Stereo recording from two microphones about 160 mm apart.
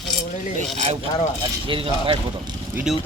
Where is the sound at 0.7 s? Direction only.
45° right (ahead or behind).